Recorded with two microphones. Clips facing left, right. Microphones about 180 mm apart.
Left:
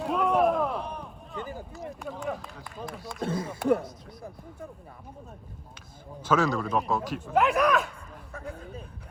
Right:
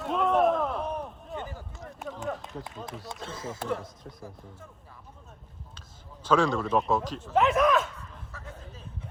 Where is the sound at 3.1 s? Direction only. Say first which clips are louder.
Left 9 dB; 55° left (ahead or behind).